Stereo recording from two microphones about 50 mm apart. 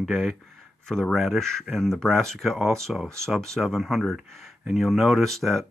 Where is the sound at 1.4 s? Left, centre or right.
Centre.